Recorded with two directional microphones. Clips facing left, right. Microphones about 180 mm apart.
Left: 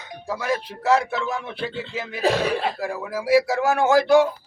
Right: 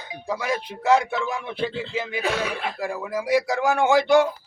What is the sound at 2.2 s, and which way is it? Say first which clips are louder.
Speech: left 8 dB; 35° left (ahead or behind).